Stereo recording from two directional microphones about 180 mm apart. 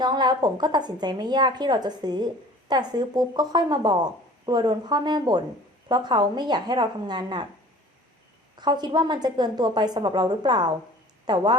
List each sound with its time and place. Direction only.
0.0 s a woman's voice: 25° right (ahead or behind)
8.5 s a woman's voice: 25° right (ahead or behind)